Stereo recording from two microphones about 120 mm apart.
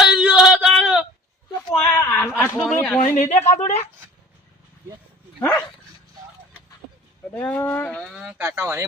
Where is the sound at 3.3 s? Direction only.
90° left.